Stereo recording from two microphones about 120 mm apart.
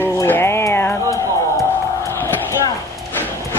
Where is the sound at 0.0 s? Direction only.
20° left (ahead or behind).